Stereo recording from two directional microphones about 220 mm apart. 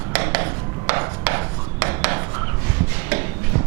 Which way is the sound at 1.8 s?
15° right (ahead or behind).